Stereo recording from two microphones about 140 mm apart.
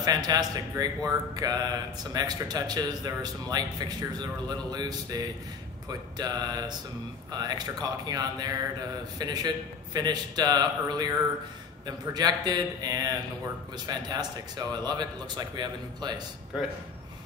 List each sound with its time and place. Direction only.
0.0 s a man's voice: 30° right (ahead or behind)